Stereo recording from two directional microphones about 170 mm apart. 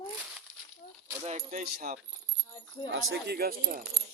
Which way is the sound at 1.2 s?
40° right (ahead or behind).